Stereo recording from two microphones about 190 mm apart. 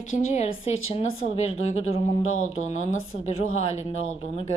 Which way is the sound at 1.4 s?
35° left (ahead or behind).